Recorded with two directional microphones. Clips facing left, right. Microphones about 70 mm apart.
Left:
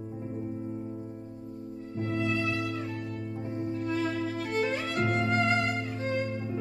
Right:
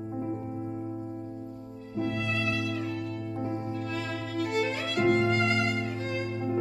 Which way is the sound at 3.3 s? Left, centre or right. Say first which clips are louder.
Even; right.